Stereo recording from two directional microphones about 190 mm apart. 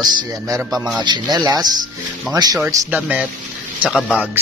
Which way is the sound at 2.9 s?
5° right (ahead or behind).